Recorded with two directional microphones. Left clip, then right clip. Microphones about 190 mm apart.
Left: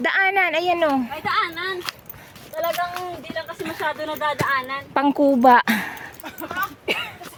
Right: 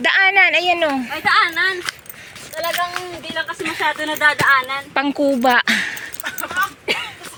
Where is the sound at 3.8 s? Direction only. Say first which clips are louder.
Right 6 dB; 40° right (ahead or behind).